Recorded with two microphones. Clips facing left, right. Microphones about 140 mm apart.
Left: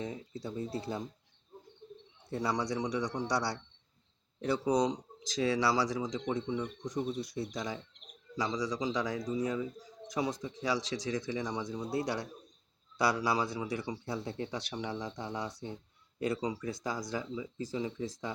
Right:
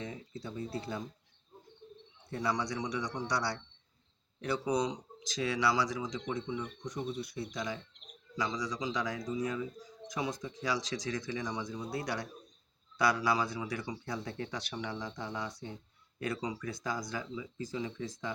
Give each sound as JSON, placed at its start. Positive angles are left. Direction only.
{"t": 0.0, "sound": "speech", "side_deg": 35}
{"t": 2.3, "sound": "speech", "side_deg": 30}